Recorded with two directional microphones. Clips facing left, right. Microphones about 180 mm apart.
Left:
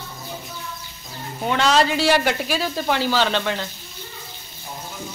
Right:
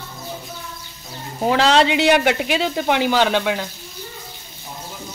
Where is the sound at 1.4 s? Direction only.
30° right (ahead or behind).